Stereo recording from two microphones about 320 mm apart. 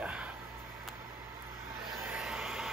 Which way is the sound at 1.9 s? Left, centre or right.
Centre.